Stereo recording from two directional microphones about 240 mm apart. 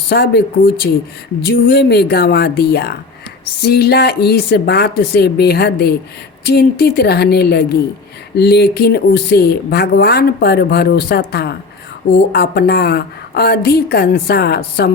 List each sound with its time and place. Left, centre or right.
0.1 s speech: left